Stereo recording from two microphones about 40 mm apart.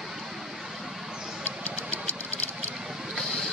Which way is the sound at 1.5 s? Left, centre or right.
Right.